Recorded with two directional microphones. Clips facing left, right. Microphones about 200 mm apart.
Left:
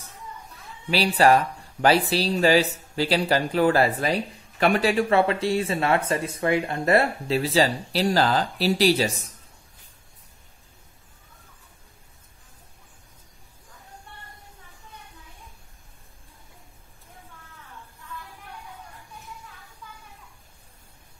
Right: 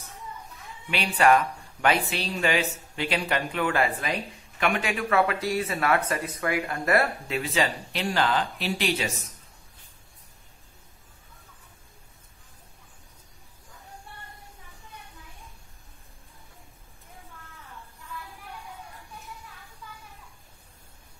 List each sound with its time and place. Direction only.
0.8 s speech: 35° left (ahead or behind)